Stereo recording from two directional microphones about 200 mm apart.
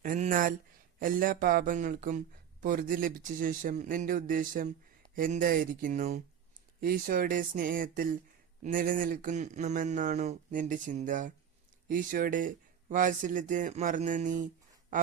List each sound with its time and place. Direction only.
0.0 s speech: 40° right (ahead or behind)